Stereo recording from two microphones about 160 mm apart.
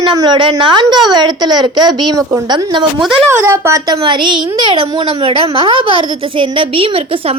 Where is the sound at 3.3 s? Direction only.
15° right (ahead or behind).